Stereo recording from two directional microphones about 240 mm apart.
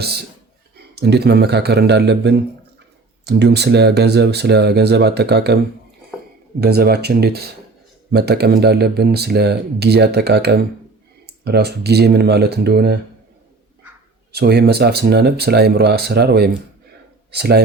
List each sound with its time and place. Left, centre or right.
0.0 s speech: right
6.1 s a sound: centre
6.6 s speech: right
14.3 s speech: right